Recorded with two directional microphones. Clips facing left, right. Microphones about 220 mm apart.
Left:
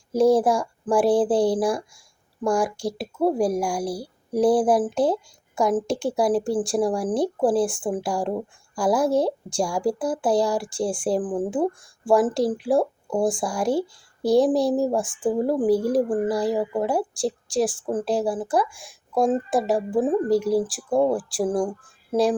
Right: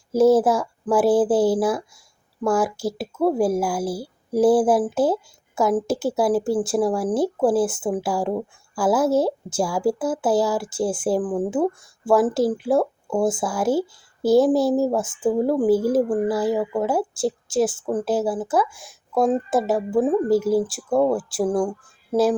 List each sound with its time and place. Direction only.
0.1 s a woman's voice: 5° right (ahead or behind)
11.2 s speech: 15° left (ahead or behind)
12.0 s a woman's voice: centre (ahead or behind)